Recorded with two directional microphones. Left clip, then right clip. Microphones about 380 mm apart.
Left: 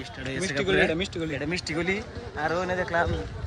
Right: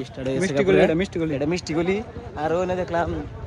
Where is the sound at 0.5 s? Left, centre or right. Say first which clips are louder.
Right 5 dB; centre.